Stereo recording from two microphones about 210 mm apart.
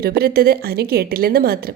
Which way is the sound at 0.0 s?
45° right (ahead or behind).